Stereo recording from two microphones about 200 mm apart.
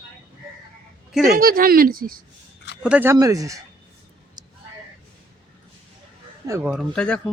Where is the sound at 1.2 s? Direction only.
45° right (ahead or behind).